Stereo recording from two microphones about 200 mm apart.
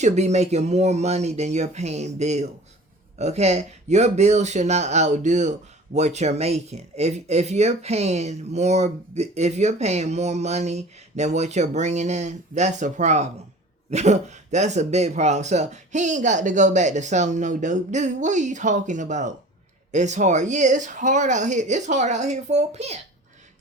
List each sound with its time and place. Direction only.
0.0 s speech: 35° right (ahead or behind)